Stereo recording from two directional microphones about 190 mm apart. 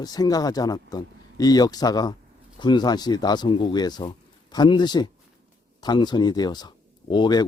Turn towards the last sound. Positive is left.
turn(degrees=25)  # may be behind; listen again after turning